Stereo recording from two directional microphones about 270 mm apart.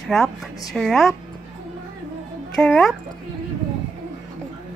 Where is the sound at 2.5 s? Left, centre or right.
Centre.